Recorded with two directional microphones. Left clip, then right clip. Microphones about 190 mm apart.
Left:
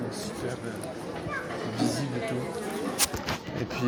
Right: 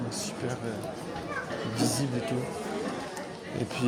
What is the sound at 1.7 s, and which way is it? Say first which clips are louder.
Music: even; 35° right (ahead or behind).